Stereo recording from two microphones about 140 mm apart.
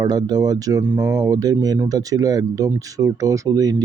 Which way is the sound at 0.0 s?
30° right (ahead or behind).